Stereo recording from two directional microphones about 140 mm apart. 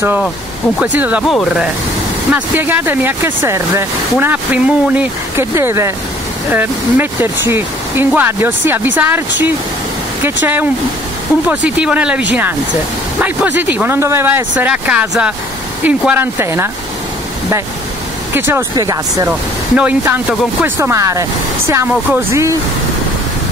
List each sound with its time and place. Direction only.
0.7 s speech: 10° right (ahead or behind)
1.2 s speech: centre (ahead or behind)
2.3 s speech: 15° right (ahead or behind)
18.3 s speech: 15° right (ahead or behind)
19.8 s speech: 10° right (ahead or behind)